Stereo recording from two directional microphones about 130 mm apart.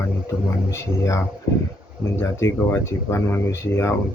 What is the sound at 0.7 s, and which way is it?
Speech, 25° left (ahead or behind).